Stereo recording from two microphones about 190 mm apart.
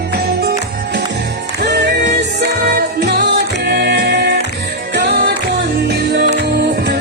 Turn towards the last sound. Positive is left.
turn(degrees=-60)  # may be behind; listen again after turning